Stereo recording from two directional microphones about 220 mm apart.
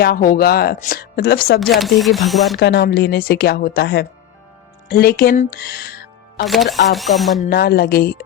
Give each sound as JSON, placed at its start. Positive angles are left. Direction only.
{"t": 0.0, "sound": "a woman's voice", "side_deg": 40}
{"t": 1.5, "sound": "speech", "side_deg": 0}
{"t": 2.6, "sound": "a woman's voice", "side_deg": 50}
{"t": 6.4, "sound": "speech", "side_deg": 0}
{"t": 7.4, "sound": "a woman's voice", "side_deg": 45}